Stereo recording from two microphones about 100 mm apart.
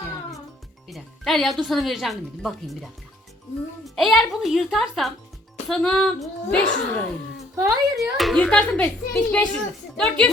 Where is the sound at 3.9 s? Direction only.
Centre (ahead or behind).